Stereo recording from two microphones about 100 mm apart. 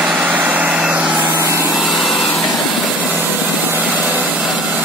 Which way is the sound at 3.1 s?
20° right (ahead or behind).